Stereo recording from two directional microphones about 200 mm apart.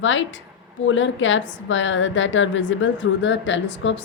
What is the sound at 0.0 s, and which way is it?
A woman's voice, 70° left (ahead or behind).